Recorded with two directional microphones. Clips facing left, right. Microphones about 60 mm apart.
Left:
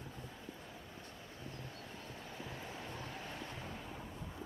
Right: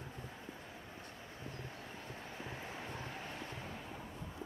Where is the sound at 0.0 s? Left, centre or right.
Right.